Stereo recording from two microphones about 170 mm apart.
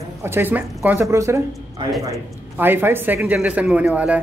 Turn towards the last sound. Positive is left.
turn(degrees=-10)  # may be behind; listen again after turning